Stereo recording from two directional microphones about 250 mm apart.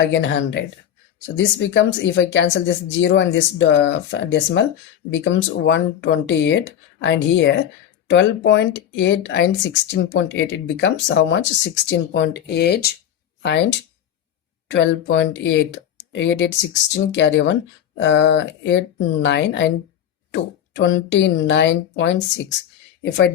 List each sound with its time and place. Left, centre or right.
0.0 s speech: left